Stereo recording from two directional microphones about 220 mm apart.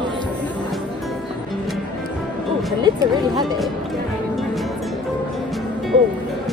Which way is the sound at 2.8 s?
20° right (ahead or behind).